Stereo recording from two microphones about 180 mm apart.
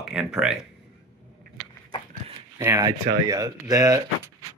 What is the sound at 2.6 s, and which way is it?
Speech, 15° right (ahead or behind).